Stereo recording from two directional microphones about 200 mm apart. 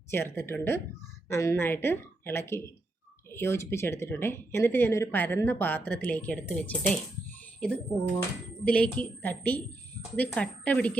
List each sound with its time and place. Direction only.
0.1 s speech: 10° left (ahead or behind)